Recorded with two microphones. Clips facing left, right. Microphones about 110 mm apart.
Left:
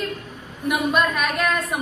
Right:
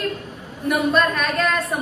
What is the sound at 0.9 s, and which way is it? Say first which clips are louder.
Speech: right 1 dB; 5° left (ahead or behind).